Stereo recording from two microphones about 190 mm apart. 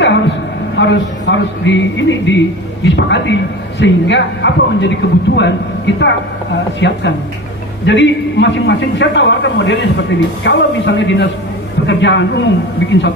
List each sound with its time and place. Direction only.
0.7 s a man's voice: 70° left (ahead or behind)